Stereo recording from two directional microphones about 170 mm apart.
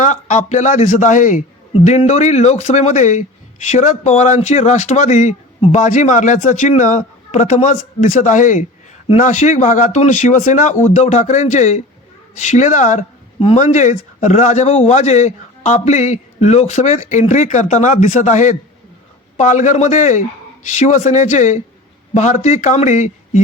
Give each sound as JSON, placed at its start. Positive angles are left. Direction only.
{"t": 0.0, "sound": "speech", "side_deg": 45}